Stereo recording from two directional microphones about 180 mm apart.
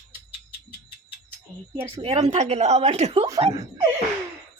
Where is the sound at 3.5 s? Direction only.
15° right (ahead or behind).